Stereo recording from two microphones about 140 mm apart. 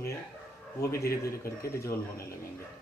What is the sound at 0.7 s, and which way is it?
Speech, 20° left (ahead or behind).